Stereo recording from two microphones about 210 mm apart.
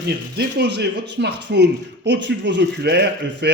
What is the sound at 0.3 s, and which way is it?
A man's voice, 55° right (ahead or behind).